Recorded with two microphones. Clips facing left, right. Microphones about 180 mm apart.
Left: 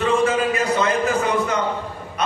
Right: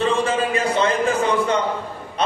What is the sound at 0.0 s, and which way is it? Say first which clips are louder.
A man's voice: left 1 dB; 30° right (ahead or behind).